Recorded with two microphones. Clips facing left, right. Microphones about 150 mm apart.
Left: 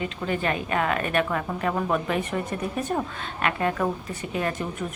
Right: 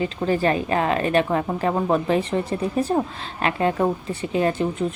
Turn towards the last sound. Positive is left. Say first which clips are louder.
# right 7 dB
turn(degrees=-30)  # may be behind; listen again after turning